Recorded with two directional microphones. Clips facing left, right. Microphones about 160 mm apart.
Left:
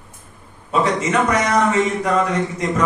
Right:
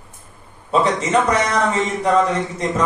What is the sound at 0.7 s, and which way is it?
A man's voice, 30° right (ahead or behind).